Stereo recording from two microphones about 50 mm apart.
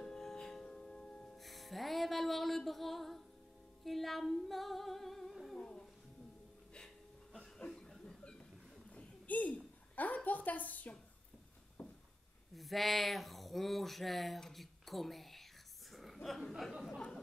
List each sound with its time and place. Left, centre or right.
0.0 s music: centre
1.3 s music: centre
3.8 s singing: centre
5.6 s music: centre
7.3 s chuckle: centre
8.9 s a sound: left
12.5 s speech: centre
14.4 s whispering: centre
15.9 s a sound: centre
16.2 s chuckle: centre